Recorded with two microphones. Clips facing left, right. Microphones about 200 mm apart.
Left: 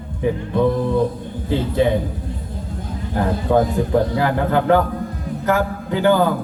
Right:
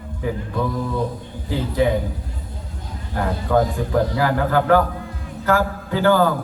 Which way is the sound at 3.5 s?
25° left (ahead or behind).